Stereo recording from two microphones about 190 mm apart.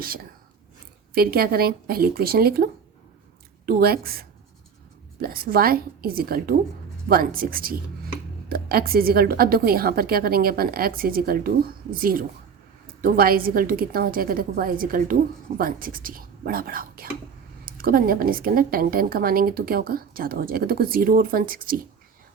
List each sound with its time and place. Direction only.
1.1 s a woman's voice: 50° right (ahead or behind)
3.7 s a woman's voice: 55° right (ahead or behind)